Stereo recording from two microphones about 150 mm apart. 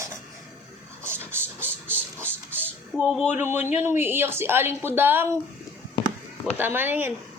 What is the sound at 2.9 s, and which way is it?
A woman's voice, 5° right (ahead or behind).